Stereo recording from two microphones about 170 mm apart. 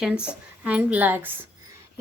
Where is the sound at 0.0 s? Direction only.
5° right (ahead or behind).